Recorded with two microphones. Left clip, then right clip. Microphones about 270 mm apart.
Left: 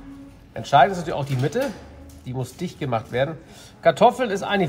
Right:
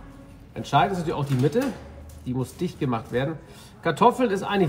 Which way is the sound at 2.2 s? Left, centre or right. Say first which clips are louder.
Right 2 dB; left.